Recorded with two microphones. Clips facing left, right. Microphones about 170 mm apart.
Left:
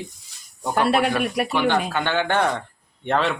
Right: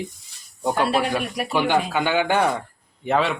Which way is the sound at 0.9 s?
60° left (ahead or behind).